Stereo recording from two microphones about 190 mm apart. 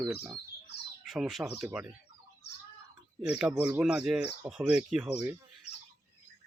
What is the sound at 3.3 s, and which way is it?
Speech, 5° right (ahead or behind).